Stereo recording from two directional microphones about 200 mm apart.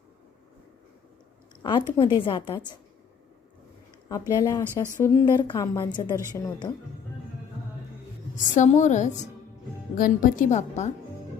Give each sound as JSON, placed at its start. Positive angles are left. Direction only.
{"t": 1.6, "sound": "a woman's voice", "side_deg": 25}
{"t": 4.1, "sound": "a woman's voice", "side_deg": 15}
{"t": 4.6, "sound": "speech", "side_deg": -10}
{"t": 5.0, "sound": "a woman's voice", "side_deg": 20}
{"t": 8.4, "sound": "speech", "side_deg": 35}